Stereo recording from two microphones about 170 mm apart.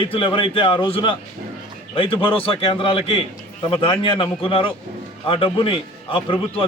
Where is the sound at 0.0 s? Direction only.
30° left (ahead or behind).